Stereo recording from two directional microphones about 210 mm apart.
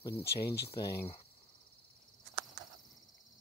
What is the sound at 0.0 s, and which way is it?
Speech, 15° left (ahead or behind).